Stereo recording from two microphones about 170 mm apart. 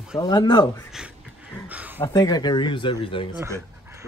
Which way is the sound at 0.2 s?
20° left (ahead or behind).